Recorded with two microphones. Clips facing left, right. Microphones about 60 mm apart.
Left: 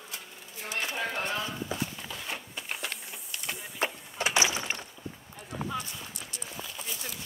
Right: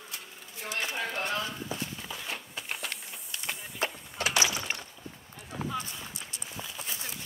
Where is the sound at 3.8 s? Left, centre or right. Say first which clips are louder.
Left 1 dB; left.